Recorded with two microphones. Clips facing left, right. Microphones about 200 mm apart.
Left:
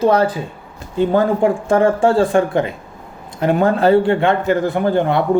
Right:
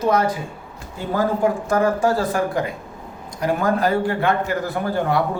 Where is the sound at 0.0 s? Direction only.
30° left (ahead or behind).